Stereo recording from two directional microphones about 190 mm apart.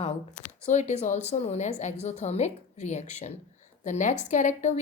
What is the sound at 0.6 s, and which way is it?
A woman's voice, 40° left (ahead or behind).